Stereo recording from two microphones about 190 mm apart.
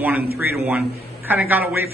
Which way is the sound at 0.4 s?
10° right (ahead or behind).